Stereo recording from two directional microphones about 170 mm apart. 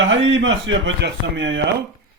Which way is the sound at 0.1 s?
90° right.